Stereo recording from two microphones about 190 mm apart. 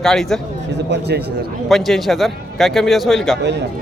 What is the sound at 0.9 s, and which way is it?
Speech, 60° right (ahead or behind).